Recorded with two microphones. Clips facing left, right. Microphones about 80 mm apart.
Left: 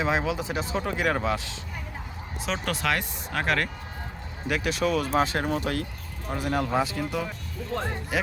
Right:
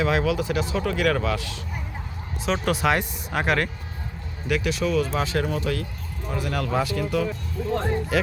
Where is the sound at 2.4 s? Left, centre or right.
Centre.